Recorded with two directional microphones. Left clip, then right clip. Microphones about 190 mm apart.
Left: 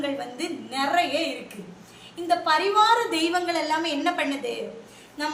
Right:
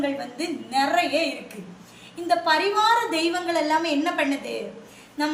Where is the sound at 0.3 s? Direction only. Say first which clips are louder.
Right 4 dB; 5° left (ahead or behind).